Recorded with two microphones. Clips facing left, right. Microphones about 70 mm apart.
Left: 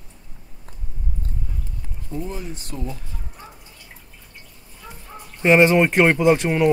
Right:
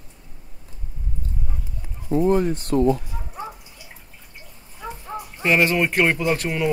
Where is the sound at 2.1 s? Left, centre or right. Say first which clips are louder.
Right 12 dB; right.